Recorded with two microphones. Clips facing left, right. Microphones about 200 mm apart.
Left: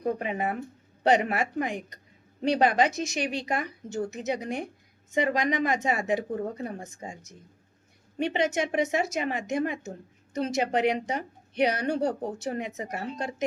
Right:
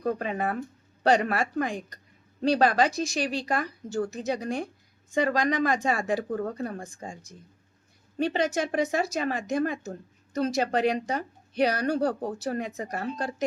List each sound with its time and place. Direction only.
0.0 s a woman's voice: 20° left (ahead or behind)